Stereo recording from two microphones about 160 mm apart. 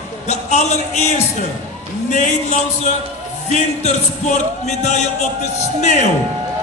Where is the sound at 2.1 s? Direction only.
45° left (ahead or behind).